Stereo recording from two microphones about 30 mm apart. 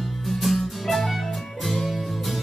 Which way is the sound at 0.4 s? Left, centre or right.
Centre.